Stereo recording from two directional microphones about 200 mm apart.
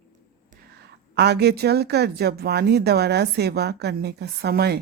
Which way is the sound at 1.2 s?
55° right (ahead or behind).